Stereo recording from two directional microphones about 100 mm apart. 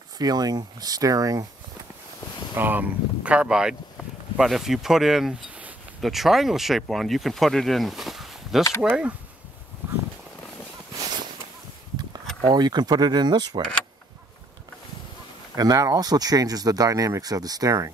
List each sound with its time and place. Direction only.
0.2 s speech: 40° right (ahead or behind)
2.5 s speech: 20° right (ahead or behind); by 8.6 s 5° right (ahead or behind)
8.8 s speech: 15° right (ahead or behind)
9.8 s a sound: 15° right (ahead or behind)
12.4 s speech: 45° right (ahead or behind)
15.5 s speech: 40° right (ahead or behind)